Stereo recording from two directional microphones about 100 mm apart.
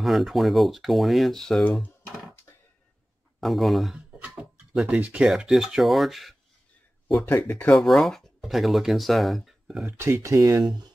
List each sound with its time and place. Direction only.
0.0 s speech: centre (ahead or behind)
3.3 s speech: centre (ahead or behind)
4.2 s a sound: 15° right (ahead or behind)
4.8 s speech: 15° right (ahead or behind)
5.3 s speech: centre (ahead or behind)
7.2 s speech: 20° left (ahead or behind)
7.8 s speech: centre (ahead or behind)
9.9 s speech: 25° right (ahead or behind)
10.6 s speech: 50° right (ahead or behind)